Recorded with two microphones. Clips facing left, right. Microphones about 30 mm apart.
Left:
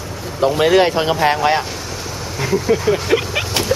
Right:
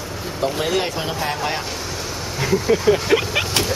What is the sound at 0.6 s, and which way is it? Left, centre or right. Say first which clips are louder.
Speech: left 9 dB; left.